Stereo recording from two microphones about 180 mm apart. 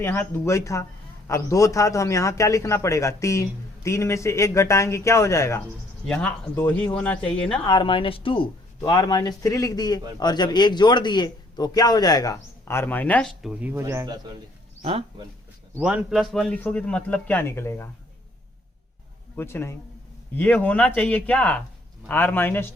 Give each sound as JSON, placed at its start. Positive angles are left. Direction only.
{"t": 0.0, "sound": "a man's voice", "side_deg": 10}
{"t": 7.7, "sound": "a man's voice", "side_deg": 30}
{"t": 14.8, "sound": "speech", "side_deg": -30}
{"t": 15.8, "sound": "a man's voice", "side_deg": -5}
{"t": 19.4, "sound": "a man's voice", "side_deg": 15}